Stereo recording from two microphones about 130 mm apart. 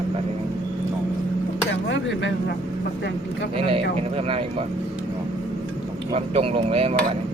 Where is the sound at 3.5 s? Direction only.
45° right (ahead or behind).